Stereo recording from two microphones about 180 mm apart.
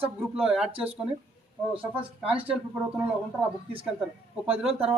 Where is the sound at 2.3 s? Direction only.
10° right (ahead or behind).